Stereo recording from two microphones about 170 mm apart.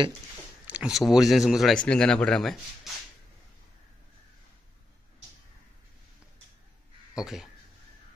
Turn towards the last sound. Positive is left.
turn(degrees=-5)  # may be behind; listen again after turning